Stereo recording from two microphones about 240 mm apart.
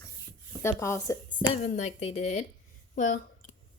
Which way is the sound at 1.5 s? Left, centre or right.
Left.